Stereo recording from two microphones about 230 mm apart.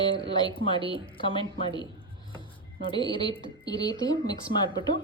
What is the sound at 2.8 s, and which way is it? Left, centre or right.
A woman's voice, centre.